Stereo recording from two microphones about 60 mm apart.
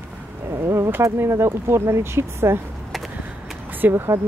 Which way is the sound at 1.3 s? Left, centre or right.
Right.